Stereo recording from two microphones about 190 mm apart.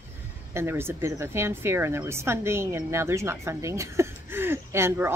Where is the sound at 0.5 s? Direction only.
15° right (ahead or behind).